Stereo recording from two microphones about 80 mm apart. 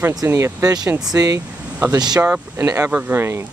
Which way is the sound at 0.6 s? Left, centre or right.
Right.